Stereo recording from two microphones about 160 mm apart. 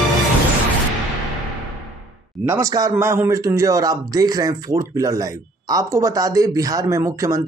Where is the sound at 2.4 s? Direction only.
20° right (ahead or behind).